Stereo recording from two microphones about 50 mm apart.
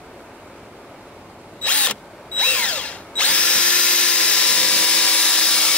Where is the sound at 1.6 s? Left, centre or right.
Left.